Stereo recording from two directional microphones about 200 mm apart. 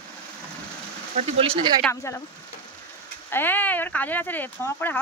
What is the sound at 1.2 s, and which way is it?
Speech, 30° right (ahead or behind).